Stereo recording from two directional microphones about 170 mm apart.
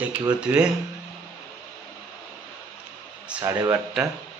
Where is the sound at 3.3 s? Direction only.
20° right (ahead or behind).